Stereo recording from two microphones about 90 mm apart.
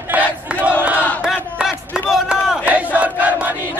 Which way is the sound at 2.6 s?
15° right (ahead or behind).